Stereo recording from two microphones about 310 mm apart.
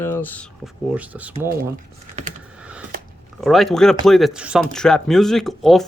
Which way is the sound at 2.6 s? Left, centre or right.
Centre.